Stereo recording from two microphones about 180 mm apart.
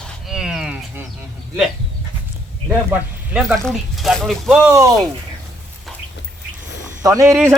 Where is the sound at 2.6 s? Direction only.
5° right (ahead or behind).